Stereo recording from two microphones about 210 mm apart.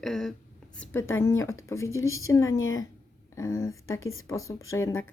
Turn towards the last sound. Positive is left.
turn(degrees=10)  # may be behind; listen again after turning